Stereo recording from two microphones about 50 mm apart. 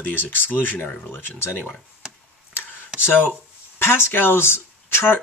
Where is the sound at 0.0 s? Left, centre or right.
Left.